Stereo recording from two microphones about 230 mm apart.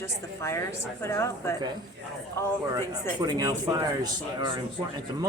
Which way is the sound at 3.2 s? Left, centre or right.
Centre.